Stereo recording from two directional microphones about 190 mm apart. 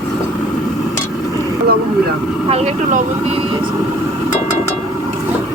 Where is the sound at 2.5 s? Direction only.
35° right (ahead or behind).